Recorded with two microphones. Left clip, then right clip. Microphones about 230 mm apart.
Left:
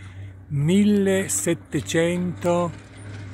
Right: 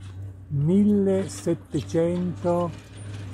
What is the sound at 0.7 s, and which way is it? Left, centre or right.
A man's voice, centre.